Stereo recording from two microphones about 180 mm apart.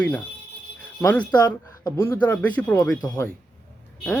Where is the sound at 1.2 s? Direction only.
25° left (ahead or behind).